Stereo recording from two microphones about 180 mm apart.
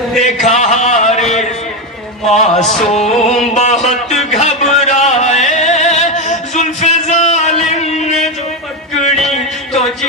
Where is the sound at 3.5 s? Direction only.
40° left (ahead or behind).